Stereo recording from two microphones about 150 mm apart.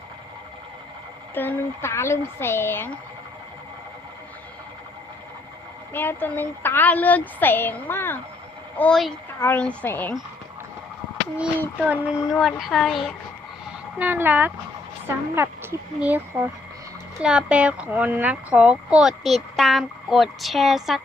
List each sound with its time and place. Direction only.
1.4 s a woman's voice: 15° left (ahead or behind)
5.9 s a woman's voice: 15° left (ahead or behind)
8.8 s a woman's voice: 5° left (ahead or behind)
11.3 s child singing: 10° right (ahead or behind)
12.3 s speech: centre (ahead or behind)
14.0 s child singing: 10° right (ahead or behind)
17.2 s speech: 5° right (ahead or behind)